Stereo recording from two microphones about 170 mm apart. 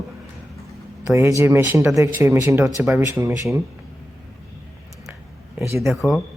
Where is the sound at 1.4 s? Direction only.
15° right (ahead or behind).